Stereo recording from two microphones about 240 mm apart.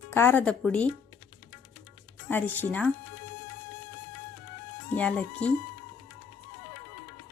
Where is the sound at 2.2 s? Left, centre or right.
Centre.